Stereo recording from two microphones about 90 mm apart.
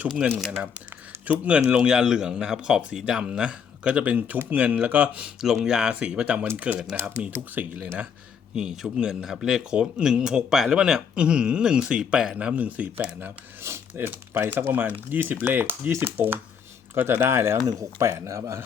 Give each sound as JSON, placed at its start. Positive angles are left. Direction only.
{"t": 1.2, "sound": "speech", "side_deg": -15}
{"t": 17.6, "sound": "speech", "side_deg": -40}